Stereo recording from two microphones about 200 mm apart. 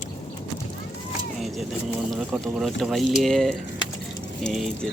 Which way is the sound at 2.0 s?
Centre (ahead or behind).